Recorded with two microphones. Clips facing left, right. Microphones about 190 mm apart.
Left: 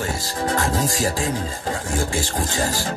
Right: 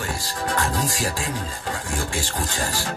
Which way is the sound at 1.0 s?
40° left (ahead or behind).